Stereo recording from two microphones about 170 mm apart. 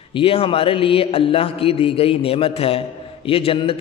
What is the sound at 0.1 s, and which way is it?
A man's voice, 35° left (ahead or behind).